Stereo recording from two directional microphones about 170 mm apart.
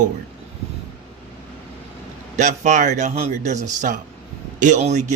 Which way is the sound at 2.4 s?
45° right (ahead or behind).